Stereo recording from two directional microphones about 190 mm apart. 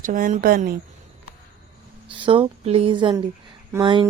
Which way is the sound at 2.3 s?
30° right (ahead or behind).